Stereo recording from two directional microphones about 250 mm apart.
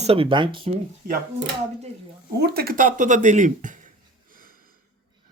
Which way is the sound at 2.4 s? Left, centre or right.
Right.